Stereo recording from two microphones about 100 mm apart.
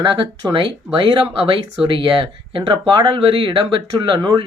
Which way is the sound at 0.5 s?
55° right (ahead or behind).